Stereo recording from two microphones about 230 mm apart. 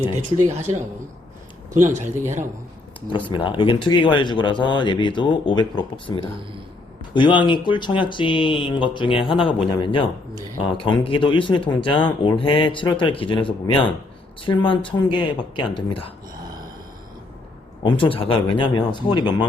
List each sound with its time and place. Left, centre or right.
1.7 s speech: centre
2.0 s speech: right
3.2 s speech: left
17.8 s speech: left